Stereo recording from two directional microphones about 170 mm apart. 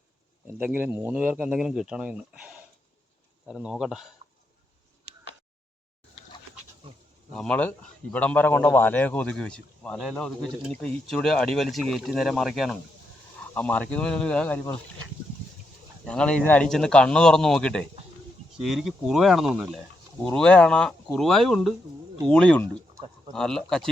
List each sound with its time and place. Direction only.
0.4 s a man's voice: 10° right (ahead or behind)
6.8 s goat: 30° right (ahead or behind)
7.3 s a man's voice: 5° left (ahead or behind)
16.0 s a man's voice: 5° left (ahead or behind)